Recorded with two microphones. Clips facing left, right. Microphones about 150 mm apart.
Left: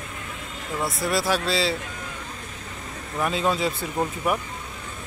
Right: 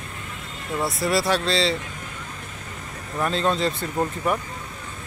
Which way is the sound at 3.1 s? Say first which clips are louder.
Right 1 dB; 5° left (ahead or behind).